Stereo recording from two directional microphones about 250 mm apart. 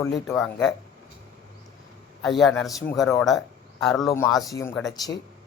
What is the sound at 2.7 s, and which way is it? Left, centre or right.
Speech, centre.